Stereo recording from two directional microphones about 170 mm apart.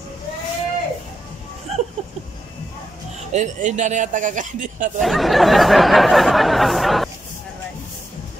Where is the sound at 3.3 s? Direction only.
45° right (ahead or behind).